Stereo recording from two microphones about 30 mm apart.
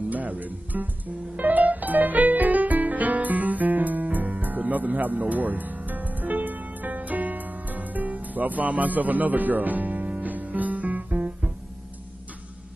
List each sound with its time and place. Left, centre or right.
0.1 s music: right
10.0 s music: right